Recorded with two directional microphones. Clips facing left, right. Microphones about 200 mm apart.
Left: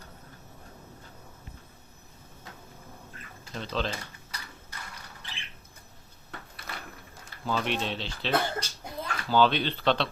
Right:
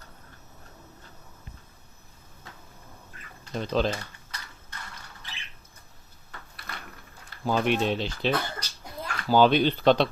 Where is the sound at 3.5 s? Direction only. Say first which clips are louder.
Right 6 dB; 50° right (ahead or behind).